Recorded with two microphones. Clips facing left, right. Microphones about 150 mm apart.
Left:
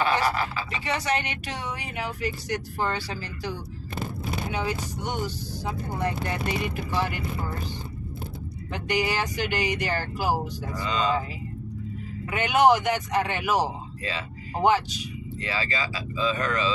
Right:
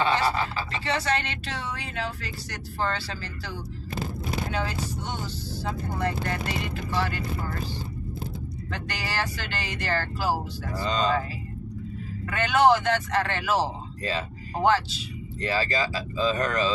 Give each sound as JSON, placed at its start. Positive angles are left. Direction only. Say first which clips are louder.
{"t": 0.0, "sound": "a sound", "louder": "even", "side_deg": -25}
{"t": 0.7, "sound": "speech", "louder": "even", "side_deg": 15}
{"t": 8.7, "sound": "speech", "louder": "left 5 dB", "side_deg": 20}
{"t": 10.8, "sound": "speech", "louder": "right 1 dB", "side_deg": -40}
{"t": 12.3, "sound": "speech", "louder": "even", "side_deg": 15}
{"t": 15.4, "sound": "speech", "louder": "right 4 dB", "side_deg": -40}